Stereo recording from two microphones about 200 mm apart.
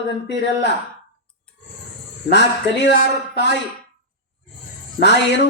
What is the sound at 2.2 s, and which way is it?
Speech, 60° left (ahead or behind).